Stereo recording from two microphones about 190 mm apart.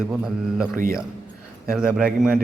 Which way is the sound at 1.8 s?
5° right (ahead or behind).